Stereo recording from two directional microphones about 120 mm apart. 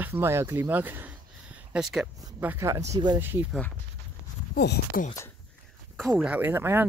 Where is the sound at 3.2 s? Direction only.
15° right (ahead or behind).